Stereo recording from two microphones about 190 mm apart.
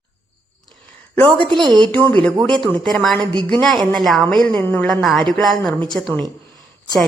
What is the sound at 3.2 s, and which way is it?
Speech, 25° right (ahead or behind).